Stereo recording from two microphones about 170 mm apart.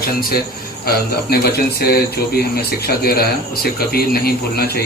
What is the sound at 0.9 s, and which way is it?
A man's voice, 65° left (ahead or behind).